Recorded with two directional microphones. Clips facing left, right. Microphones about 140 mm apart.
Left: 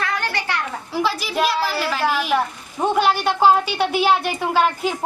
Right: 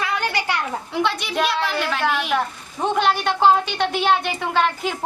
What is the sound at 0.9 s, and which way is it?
A woman's voice, centre (ahead or behind).